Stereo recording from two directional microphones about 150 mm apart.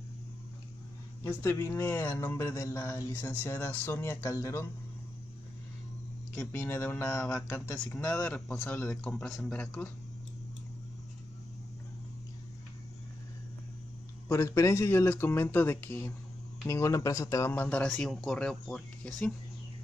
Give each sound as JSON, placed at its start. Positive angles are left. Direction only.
{"t": 1.2, "sound": "speech", "side_deg": 20}
{"t": 6.3, "sound": "speech", "side_deg": 10}
{"t": 14.3, "sound": "speech", "side_deg": 20}